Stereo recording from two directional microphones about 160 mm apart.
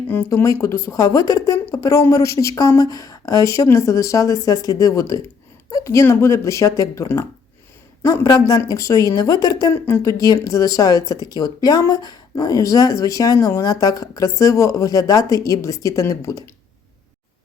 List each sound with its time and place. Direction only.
0.1 s speech: 15° left (ahead or behind)